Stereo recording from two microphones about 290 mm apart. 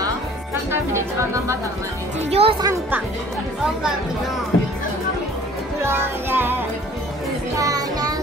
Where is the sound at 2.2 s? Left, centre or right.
Right.